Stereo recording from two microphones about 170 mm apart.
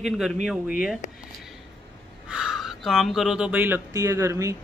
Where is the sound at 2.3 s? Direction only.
5° right (ahead or behind).